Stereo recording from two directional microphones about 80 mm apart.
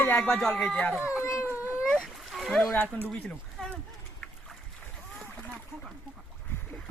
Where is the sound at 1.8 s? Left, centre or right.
Centre.